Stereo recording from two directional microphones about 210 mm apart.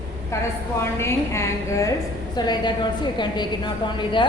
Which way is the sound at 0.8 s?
15° left (ahead or behind).